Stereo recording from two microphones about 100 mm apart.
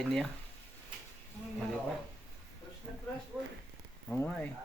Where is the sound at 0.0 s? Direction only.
Centre (ahead or behind).